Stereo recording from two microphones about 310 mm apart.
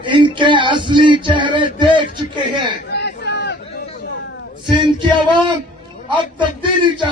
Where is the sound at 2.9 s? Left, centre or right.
Left.